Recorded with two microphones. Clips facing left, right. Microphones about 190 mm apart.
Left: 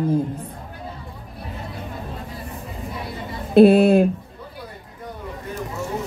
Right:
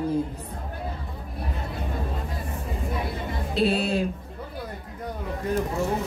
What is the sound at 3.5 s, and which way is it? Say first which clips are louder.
Speech: left 12 dB; 55° left (ahead or behind).